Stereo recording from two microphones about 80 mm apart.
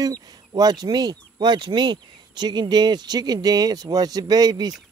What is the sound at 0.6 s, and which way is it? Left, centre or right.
Speech, right.